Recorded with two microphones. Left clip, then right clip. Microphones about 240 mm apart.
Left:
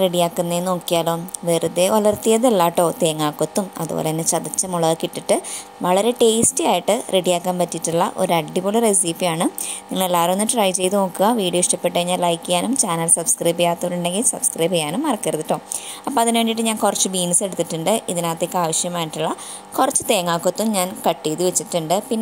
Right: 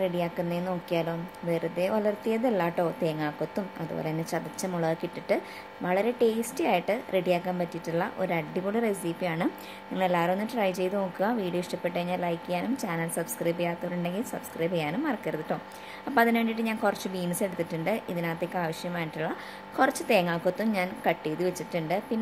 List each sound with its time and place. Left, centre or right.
0.2 s a woman's voice: left